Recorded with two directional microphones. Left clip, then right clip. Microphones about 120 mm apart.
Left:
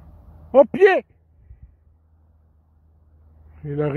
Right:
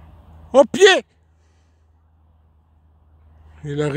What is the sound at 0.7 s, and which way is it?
Speech, 25° right (ahead or behind).